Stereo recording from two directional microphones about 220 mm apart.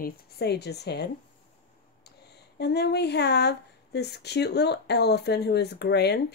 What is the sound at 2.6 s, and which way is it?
Speech, 50° left (ahead or behind).